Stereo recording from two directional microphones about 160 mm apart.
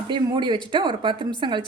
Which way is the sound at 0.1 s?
30° right (ahead or behind).